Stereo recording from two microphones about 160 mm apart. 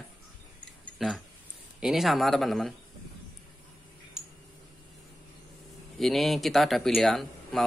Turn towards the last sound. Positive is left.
turn(degrees=0)  # may be behind; listen again after turning